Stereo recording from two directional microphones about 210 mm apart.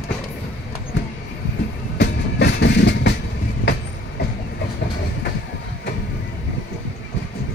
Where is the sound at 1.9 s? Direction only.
55° left (ahead or behind).